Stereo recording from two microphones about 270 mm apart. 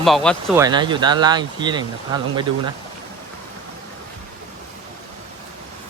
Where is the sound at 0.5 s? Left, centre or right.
Centre.